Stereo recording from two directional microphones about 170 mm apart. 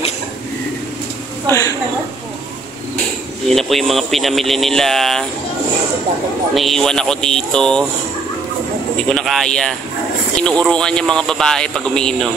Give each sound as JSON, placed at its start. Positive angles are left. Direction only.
{"t": 1.5, "sound": "a woman's voice", "side_deg": 20}
{"t": 3.4, "sound": "speech", "side_deg": 0}
{"t": 6.5, "sound": "speech", "side_deg": 0}
{"t": 9.1, "sound": "speech", "side_deg": 0}